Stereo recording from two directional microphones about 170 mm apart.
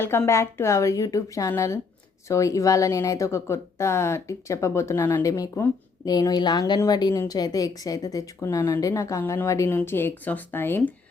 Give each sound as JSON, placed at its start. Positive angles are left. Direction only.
{"t": 0.0, "sound": "speech", "side_deg": 15}